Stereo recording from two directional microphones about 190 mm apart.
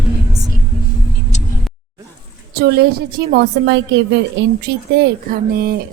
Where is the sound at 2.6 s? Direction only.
60° right (ahead or behind).